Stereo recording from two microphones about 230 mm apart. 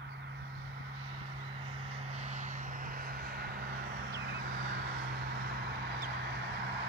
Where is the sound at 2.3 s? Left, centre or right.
Right.